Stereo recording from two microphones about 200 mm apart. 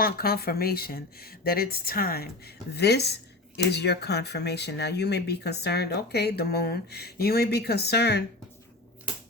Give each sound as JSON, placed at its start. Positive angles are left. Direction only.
{"t": 0.0, "sound": "speech", "side_deg": 50}